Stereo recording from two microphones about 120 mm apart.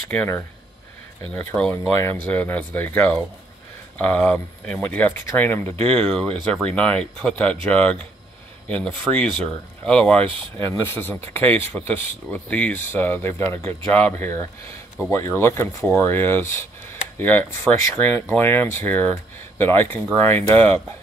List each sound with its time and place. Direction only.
0.1 s speech: 15° left (ahead or behind)
1.5 s speech: 10° left (ahead or behind)
5.9 s speech: 5° left (ahead or behind)
10.2 s speech: 45° right (ahead or behind)
10.6 s speech: 20° left (ahead or behind)